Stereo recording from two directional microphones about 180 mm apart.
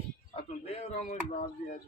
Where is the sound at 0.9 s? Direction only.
40° left (ahead or behind).